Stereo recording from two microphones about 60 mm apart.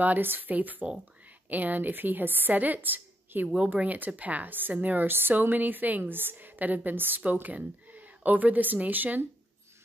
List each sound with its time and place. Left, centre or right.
0.0 s a woman's voice: right
3.4 s speech: centre
3.7 s a woman's voice: right